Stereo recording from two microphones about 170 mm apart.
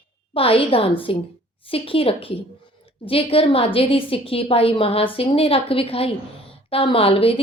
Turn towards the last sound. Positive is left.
turn(degrees=35)  # may be behind; listen again after turning